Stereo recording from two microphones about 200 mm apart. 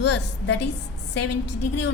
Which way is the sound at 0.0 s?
60° left (ahead or behind).